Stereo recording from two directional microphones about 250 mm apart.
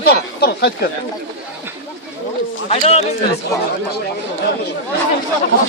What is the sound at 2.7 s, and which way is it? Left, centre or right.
Speech, left.